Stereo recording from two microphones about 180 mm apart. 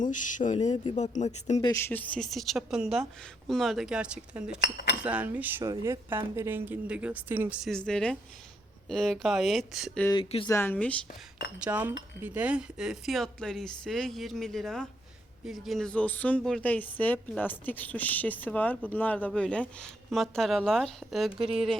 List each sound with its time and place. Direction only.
0.0 s speech: 45° left (ahead or behind)
1.6 s a woman's voice: 15° left (ahead or behind); by 4.5 s 5° right (ahead or behind)
4.6 s speech: 65° left (ahead or behind)
5.0 s a woman's voice: 10° right (ahead or behind)
10.2 s speech: 30° left (ahead or behind)
10.5 s a woman's voice: 10° left (ahead or behind)
11.1 s speech: 60° left (ahead or behind)
11.6 s a woman's voice: 5° right (ahead or behind)